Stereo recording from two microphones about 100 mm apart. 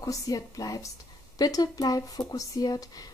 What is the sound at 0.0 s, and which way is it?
Speech, 35° left (ahead or behind).